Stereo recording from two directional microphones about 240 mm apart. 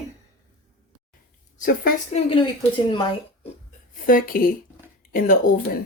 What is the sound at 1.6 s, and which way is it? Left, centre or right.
Speech, left.